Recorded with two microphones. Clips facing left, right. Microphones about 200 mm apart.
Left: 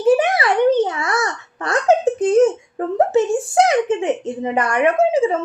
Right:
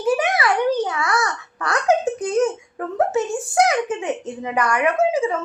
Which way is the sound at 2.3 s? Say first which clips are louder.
Left 6 dB; 30° left (ahead or behind).